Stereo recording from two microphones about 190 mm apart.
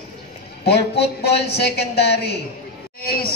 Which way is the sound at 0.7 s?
60° left (ahead or behind).